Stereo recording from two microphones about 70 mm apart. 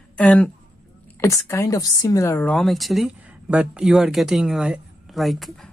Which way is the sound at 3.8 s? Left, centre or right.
Centre.